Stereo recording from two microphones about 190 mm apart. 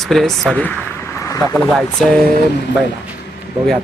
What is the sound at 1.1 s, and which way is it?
Vehicle, 15° left (ahead or behind).